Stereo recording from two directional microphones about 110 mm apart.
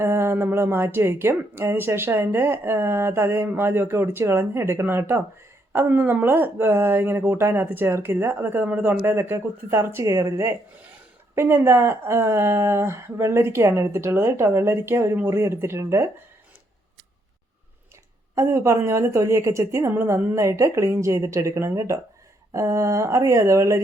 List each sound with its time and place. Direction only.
0.0 s speech: 25° right (ahead or behind)
18.3 s speech: 25° right (ahead or behind)